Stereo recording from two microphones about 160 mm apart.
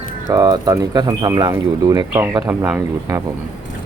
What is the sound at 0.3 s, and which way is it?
Speech, 25° right (ahead or behind).